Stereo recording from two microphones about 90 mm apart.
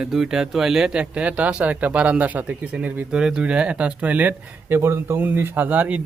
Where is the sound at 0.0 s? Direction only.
5° right (ahead or behind).